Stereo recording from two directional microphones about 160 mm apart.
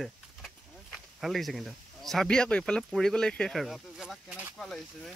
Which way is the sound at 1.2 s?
Centre (ahead or behind).